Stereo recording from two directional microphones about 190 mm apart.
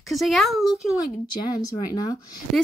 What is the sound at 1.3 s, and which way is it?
Speech, 20° left (ahead or behind).